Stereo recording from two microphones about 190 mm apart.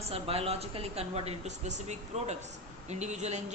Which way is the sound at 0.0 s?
30° right (ahead or behind).